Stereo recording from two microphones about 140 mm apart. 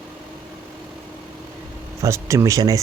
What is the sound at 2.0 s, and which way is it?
Speech, 20° right (ahead or behind).